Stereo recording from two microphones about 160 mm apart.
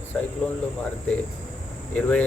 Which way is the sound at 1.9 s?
10° left (ahead or behind).